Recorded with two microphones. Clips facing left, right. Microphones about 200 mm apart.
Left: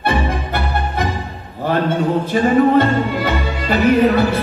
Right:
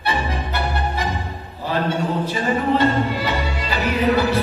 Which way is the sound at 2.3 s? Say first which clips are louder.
Left 9 dB; 50° left (ahead or behind).